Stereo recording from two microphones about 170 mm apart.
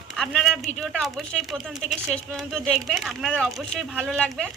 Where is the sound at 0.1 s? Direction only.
Centre (ahead or behind).